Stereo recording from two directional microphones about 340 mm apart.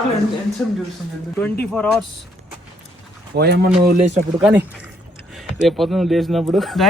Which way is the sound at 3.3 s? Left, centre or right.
Right.